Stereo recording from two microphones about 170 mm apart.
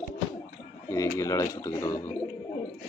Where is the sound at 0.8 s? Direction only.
15° left (ahead or behind).